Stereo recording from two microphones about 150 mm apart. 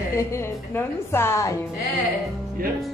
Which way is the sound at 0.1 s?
20° left (ahead or behind).